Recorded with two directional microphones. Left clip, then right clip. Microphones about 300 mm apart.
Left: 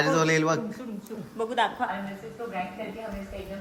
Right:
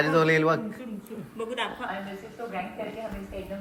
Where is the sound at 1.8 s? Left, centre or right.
Left.